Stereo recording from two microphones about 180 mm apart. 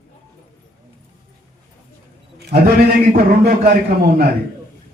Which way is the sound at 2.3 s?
65° right (ahead or behind).